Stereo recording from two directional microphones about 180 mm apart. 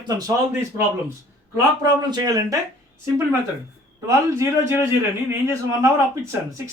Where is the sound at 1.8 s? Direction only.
25° right (ahead or behind).